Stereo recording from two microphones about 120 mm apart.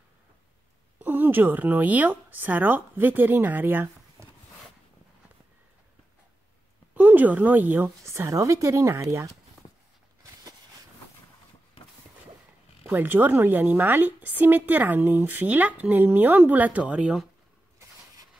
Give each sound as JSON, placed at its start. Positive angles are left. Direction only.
{"t": 0.9, "sound": "speech", "side_deg": -15}
{"t": 7.0, "sound": "a woman's voice", "side_deg": -15}
{"t": 12.8, "sound": "a woman's voice", "side_deg": -15}